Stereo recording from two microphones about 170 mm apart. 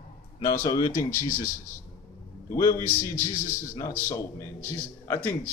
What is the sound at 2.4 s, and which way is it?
A man's voice, 20° left (ahead or behind).